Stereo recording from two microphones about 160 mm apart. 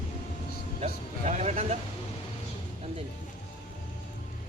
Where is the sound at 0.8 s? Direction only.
45° right (ahead or behind).